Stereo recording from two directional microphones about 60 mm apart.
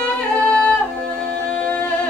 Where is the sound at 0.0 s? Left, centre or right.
Centre.